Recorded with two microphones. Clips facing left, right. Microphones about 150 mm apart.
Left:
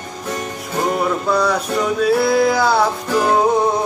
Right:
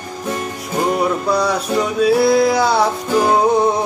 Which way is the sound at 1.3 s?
Centre (ahead or behind).